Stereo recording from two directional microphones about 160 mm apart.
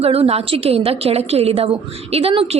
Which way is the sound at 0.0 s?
40° right (ahead or behind).